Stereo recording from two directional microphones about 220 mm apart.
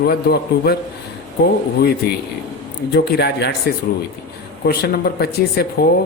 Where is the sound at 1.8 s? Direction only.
45° left (ahead or behind).